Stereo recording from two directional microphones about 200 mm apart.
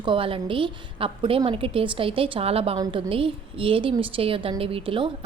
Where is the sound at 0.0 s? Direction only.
25° right (ahead or behind).